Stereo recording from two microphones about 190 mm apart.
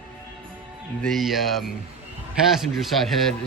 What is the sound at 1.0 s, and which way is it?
Speech, centre (ahead or behind).